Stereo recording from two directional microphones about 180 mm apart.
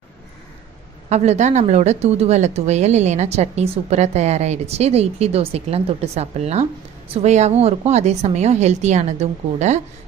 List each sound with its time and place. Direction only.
1.1 s a woman's voice: 40° right (ahead or behind)